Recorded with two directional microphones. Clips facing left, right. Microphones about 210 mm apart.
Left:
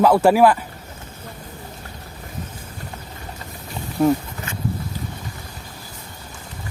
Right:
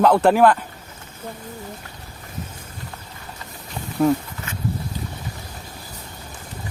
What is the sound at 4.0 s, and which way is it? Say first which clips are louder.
Speech: left 1 dB; 10° left (ahead or behind).